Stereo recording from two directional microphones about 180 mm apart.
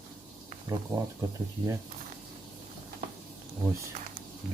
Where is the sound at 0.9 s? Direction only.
20° right (ahead or behind).